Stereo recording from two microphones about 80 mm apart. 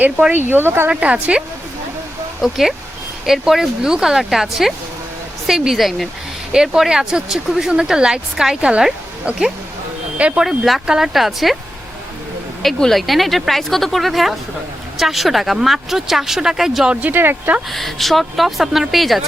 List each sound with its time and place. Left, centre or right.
0.0 s speech: centre
0.6 s speech: right
0.9 s speech: centre
2.4 s speech: centre
10.4 s speech: centre
12.6 s speech: centre
16.9 s speech: right
17.7 s speech: centre